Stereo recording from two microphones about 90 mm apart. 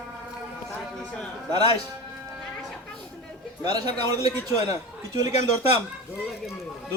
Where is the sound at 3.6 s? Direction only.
50° right (ahead or behind).